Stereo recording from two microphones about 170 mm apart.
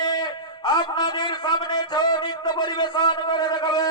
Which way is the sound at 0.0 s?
25° left (ahead or behind).